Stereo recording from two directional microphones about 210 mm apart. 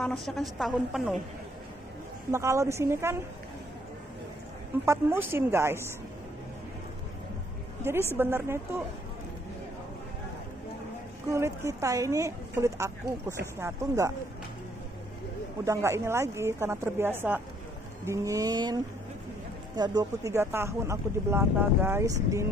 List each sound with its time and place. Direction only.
0.0 s a woman's voice: centre (ahead or behind)
2.3 s a woman's voice: 15° right (ahead or behind)
4.8 s a woman's voice: 10° right (ahead or behind)
7.8 s a woman's voice: 10° right (ahead or behind)
11.3 s a woman's voice: 15° right (ahead or behind)
15.6 s a woman's voice: 15° right (ahead or behind)